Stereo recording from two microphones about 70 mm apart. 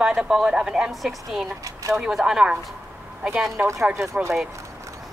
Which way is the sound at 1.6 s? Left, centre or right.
Right.